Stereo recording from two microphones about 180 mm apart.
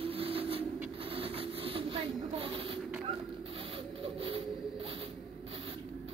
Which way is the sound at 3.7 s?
30° right (ahead or behind).